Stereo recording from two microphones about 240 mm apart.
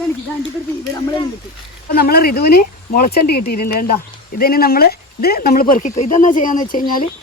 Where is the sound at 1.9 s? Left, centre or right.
Left.